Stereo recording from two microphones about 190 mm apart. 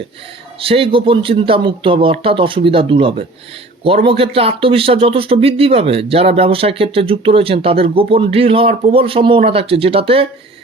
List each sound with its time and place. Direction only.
0.6 s speech: 30° right (ahead or behind)